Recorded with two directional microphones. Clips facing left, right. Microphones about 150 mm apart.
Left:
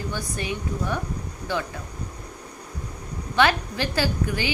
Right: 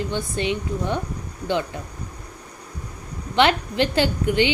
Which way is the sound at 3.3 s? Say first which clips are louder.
Right 2 dB; 25° right (ahead or behind).